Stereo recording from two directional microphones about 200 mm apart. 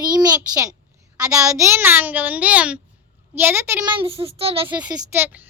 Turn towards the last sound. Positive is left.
turn(degrees=-10)  # may be behind; listen again after turning